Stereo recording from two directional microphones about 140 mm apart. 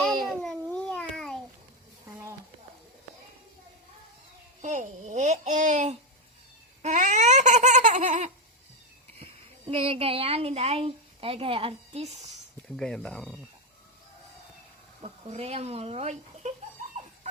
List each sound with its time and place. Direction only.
0.3 s a sound: 5° left (ahead or behind)
2.0 s a sound: 20° right (ahead or behind)
4.6 s speech: 60° right (ahead or behind)
6.8 s laughter: 60° right (ahead or behind)
9.1 s a woman's voice: 40° right (ahead or behind)
12.6 s speech: 5° left (ahead or behind)
15.0 s speech: 50° right (ahead or behind)